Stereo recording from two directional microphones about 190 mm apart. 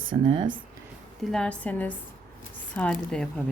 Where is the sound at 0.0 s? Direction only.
25° right (ahead or behind).